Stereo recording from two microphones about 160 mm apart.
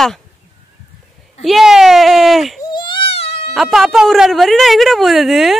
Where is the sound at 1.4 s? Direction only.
Centre (ahead or behind).